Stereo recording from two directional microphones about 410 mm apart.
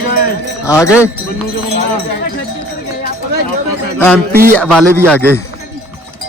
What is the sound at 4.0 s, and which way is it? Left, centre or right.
Speech, centre.